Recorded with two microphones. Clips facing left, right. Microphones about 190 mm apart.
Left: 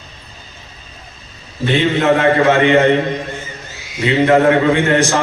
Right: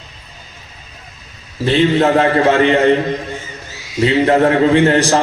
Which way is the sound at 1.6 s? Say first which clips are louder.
Right 2 dB; 35° right (ahead or behind).